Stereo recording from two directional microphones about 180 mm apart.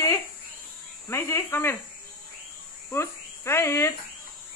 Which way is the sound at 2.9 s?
15° left (ahead or behind).